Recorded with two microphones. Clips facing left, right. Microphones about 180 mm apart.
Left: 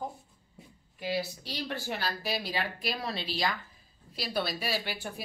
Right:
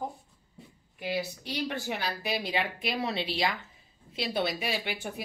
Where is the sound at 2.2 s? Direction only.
20° right (ahead or behind).